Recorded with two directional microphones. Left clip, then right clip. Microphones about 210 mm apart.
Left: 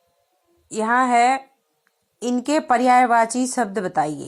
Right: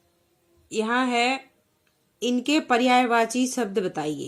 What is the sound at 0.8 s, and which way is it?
A woman's voice, 20° left (ahead or behind).